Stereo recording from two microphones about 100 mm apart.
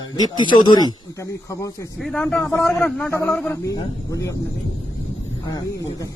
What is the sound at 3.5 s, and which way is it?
Speech, 30° left (ahead or behind).